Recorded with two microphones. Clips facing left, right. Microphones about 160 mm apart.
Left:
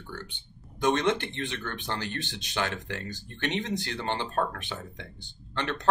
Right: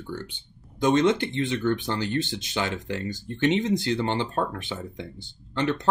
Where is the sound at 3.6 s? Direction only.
15° right (ahead or behind).